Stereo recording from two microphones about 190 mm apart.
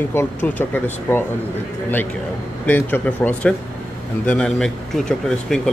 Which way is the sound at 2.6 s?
10° left (ahead or behind).